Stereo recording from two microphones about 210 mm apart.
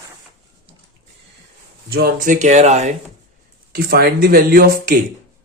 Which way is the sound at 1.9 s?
45° right (ahead or behind).